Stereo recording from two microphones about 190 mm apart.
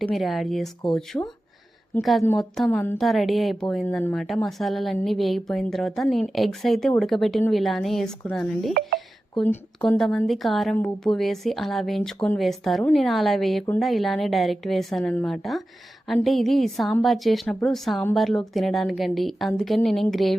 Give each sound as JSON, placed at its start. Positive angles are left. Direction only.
{"t": 0.1, "sound": "speech", "side_deg": 0}
{"t": 1.1, "sound": "a woman's voice", "side_deg": 15}
{"t": 2.0, "sound": "a woman's voice", "side_deg": 0}
{"t": 3.0, "sound": "speech", "side_deg": 0}